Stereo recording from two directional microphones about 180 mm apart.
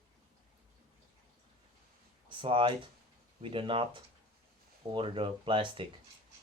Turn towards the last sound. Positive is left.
turn(degrees=-30)  # may be behind; listen again after turning